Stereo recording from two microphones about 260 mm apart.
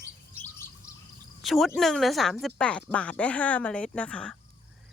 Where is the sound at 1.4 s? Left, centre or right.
Centre.